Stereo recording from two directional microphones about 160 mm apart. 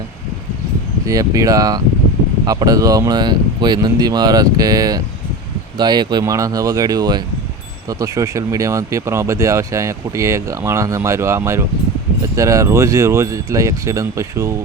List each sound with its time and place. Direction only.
1.0 s speech: 20° right (ahead or behind)